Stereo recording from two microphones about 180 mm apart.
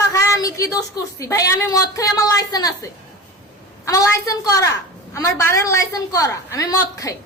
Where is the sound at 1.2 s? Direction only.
15° left (ahead or behind).